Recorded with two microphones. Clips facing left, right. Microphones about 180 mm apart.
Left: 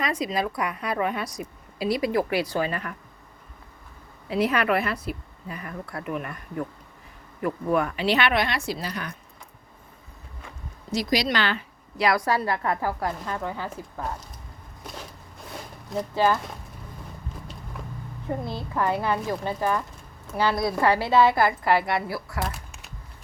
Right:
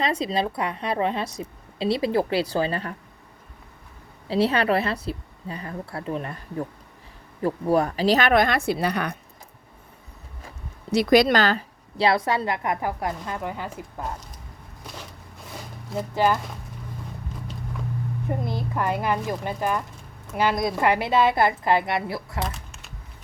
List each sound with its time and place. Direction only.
0.0 s a woman's voice: 30° right (ahead or behind)
4.3 s a woman's voice: 30° right (ahead or behind); by 9.1 s 65° right (ahead or behind)
10.9 s a woman's voice: 60° right (ahead or behind); by 13.8 s 15° right (ahead or behind)
15.5 s a sound: 5° right (ahead or behind)
16.1 s speech: 15° right (ahead or behind)
18.3 s a woman's voice: 15° right (ahead or behind)